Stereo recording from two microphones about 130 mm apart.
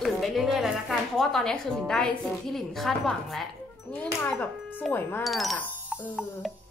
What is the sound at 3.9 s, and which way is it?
Speech, 15° left (ahead or behind).